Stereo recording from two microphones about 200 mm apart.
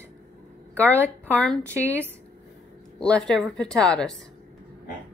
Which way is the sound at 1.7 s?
10° right (ahead or behind).